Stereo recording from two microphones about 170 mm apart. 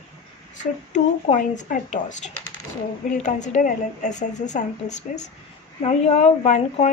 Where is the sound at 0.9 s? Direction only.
45° left (ahead or behind).